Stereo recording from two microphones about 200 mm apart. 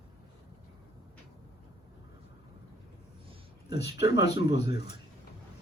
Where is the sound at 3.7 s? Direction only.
55° left (ahead or behind).